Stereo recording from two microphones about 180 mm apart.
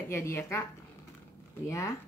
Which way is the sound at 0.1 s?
15° left (ahead or behind).